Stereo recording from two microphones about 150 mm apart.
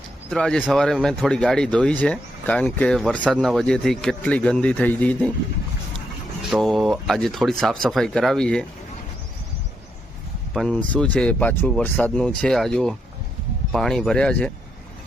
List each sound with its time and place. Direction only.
0.3 s speech: 5° left (ahead or behind)
6.5 s speech: centre (ahead or behind)
10.5 s speech: 5° left (ahead or behind)